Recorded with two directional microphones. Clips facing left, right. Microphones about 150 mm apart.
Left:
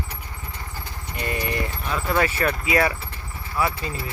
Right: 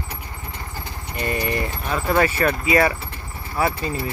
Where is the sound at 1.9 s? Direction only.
45° right (ahead or behind).